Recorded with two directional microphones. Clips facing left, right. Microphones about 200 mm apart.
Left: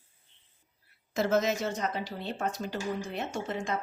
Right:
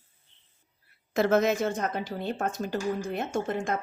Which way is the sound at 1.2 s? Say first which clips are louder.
Right 4 dB; 60° right (ahead or behind).